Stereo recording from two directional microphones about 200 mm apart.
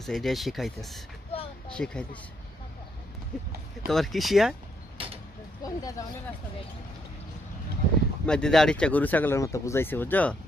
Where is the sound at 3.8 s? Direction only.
Centre (ahead or behind).